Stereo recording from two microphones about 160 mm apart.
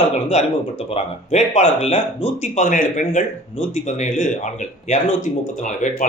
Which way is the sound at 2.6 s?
55° left (ahead or behind).